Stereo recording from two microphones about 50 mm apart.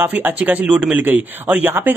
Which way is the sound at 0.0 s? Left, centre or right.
Right.